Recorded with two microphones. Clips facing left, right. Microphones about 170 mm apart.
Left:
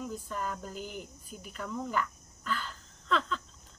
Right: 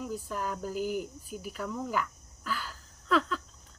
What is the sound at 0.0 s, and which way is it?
Speech, 5° right (ahead or behind).